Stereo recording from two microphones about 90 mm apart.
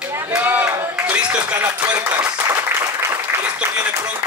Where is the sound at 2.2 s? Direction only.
40° right (ahead or behind).